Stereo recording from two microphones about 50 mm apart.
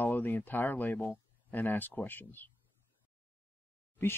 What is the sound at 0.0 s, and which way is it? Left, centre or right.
Speech, left.